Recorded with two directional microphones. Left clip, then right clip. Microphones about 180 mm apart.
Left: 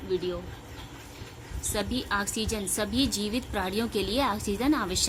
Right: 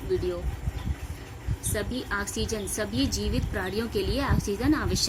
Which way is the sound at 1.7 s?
30° left (ahead or behind).